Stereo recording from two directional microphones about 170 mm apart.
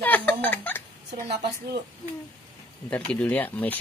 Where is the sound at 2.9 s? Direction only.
10° left (ahead or behind).